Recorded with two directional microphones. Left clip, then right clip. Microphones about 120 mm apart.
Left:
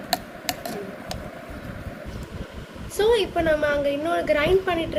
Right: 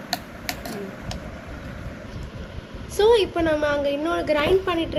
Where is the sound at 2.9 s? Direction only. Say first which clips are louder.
Right 2 dB; 50° right (ahead or behind).